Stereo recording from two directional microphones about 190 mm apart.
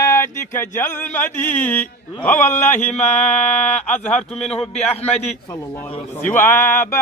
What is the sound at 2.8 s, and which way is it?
Speech, 35° left (ahead or behind).